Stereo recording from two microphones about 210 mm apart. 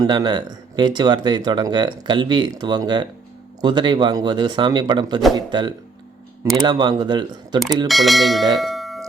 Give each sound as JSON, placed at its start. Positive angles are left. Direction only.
{"t": 0.0, "sound": "speech", "side_deg": -20}
{"t": 7.9, "sound": "speech", "side_deg": 0}
{"t": 8.5, "sound": "bell", "side_deg": 0}